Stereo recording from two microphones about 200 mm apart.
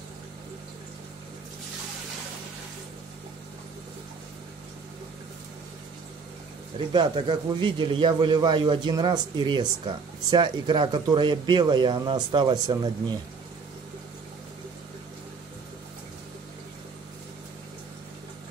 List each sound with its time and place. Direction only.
6.9 s a man's voice: 25° right (ahead or behind)